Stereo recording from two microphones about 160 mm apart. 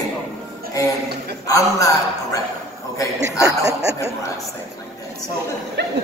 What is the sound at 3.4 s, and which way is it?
Chuckle, 20° right (ahead or behind).